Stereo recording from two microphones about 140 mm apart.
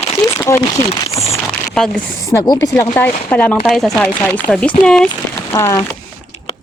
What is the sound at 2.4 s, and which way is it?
Speech, 25° left (ahead or behind).